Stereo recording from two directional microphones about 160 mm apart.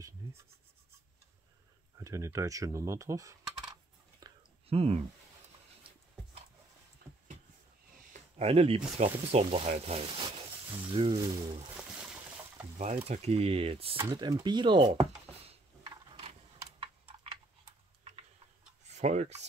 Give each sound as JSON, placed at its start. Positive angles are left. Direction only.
{"t": 2.0, "sound": "coin", "side_deg": -20}
{"t": 4.2, "sound": "whispering", "side_deg": -25}
{"t": 4.6, "sound": "speech", "side_deg": -40}
{"t": 8.1, "sound": "speech", "side_deg": -40}
{"t": 11.7, "sound": "boat", "side_deg": -10}
{"t": 12.7, "sound": "speech", "side_deg": -45}
{"t": 15.8, "sound": "a sound", "side_deg": -25}
{"t": 16.8, "sound": "typing", "side_deg": -35}
{"t": 18.9, "sound": "speech", "side_deg": -45}